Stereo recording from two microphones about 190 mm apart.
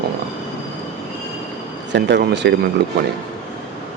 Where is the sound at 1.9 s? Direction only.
60° right (ahead or behind).